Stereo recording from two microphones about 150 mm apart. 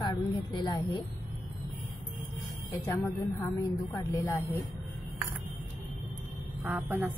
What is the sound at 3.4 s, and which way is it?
A woman's voice, 20° left (ahead or behind).